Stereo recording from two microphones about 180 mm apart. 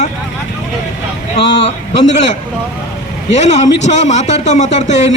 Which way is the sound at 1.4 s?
70° left (ahead or behind).